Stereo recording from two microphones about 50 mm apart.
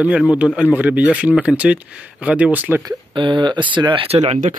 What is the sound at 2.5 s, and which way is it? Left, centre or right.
Speech, right.